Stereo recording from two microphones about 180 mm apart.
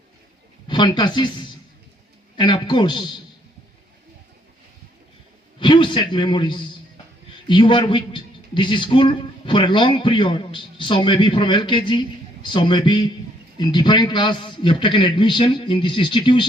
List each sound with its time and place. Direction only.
0.7 s a man's voice: 25° left (ahead or behind)
5.5 s a man's voice: 25° left (ahead or behind)